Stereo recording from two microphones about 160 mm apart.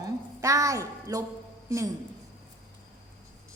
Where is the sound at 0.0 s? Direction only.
20° right (ahead or behind).